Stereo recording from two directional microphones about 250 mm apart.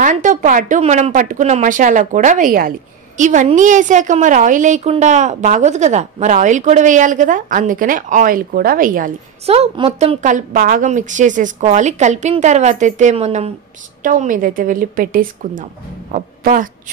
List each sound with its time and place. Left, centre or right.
0.0 s a woman's voice: right